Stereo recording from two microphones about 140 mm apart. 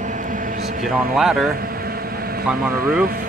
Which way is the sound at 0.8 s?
Centre (ahead or behind).